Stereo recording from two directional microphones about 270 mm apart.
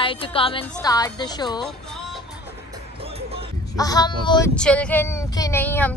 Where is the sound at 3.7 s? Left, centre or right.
Centre.